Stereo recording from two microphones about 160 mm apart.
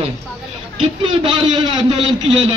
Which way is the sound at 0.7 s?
30° right (ahead or behind).